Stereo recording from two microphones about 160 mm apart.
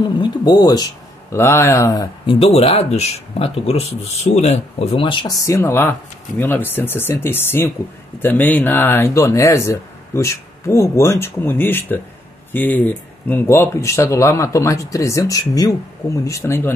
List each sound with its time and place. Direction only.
0.2 s speech: 25° left (ahead or behind)
2.2 s speech: 35° left (ahead or behind)
5.4 s speech: 15° left (ahead or behind)